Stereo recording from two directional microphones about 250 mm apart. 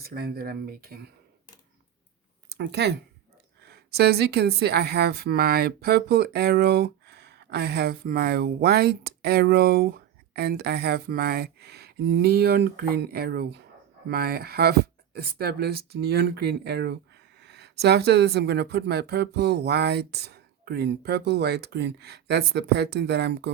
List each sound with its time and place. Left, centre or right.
0.0 s speech: right
2.5 s speech: right